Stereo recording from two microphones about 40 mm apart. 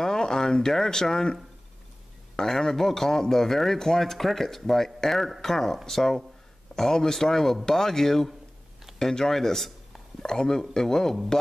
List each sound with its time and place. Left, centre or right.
0.0 s speech: centre